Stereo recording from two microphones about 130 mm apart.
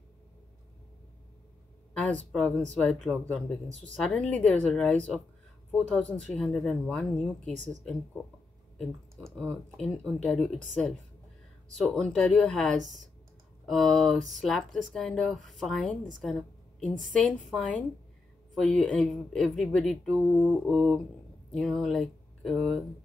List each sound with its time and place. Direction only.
2.0 s speech: 10° left (ahead or behind)
3.6 s speech: 65° right (ahead or behind)
3.9 s speech: 5° left (ahead or behind)
12.7 s speech: 70° right (ahead or behind)
13.7 s speech: 5° left (ahead or behind)
18.5 s speech: 5° left (ahead or behind)